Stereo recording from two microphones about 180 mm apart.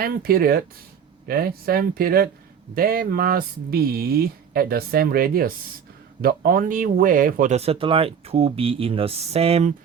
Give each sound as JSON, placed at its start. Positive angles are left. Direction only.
{"t": 0.0, "sound": "speech", "side_deg": -55}